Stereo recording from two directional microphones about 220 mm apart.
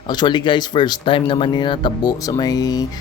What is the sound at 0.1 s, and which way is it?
Speech, 20° left (ahead or behind).